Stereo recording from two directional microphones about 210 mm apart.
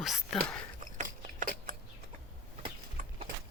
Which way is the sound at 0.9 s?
40° right (ahead or behind).